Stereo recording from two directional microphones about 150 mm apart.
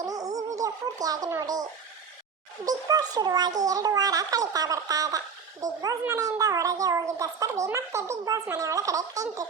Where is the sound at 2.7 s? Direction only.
25° right (ahead or behind).